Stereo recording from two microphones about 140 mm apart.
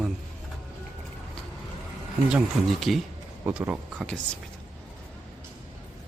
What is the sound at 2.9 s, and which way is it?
Speech, centre (ahead or behind).